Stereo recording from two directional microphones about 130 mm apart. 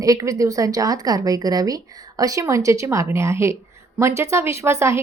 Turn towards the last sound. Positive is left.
turn(degrees=-20)  # may be behind; listen again after turning